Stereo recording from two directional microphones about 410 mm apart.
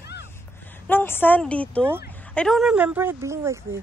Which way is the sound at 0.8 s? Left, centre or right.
Centre.